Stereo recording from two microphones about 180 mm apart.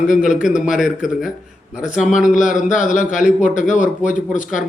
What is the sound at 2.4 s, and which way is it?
Speech, 45° left (ahead or behind).